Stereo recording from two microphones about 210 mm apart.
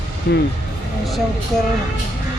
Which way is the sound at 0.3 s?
50° left (ahead or behind).